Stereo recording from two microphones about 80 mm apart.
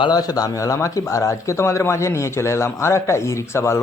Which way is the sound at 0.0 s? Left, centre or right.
Left.